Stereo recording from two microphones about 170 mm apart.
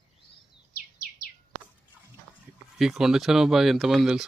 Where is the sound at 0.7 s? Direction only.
60° left (ahead or behind).